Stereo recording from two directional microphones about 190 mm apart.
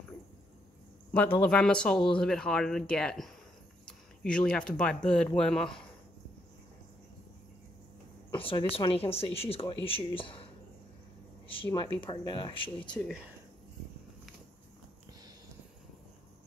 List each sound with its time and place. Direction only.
1.1 s speech: 10° left (ahead or behind)
8.5 s speech: 30° left (ahead or behind)
11.4 s speech: 25° left (ahead or behind)